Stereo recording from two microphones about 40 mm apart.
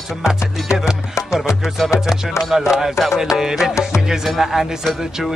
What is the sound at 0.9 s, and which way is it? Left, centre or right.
Music, centre.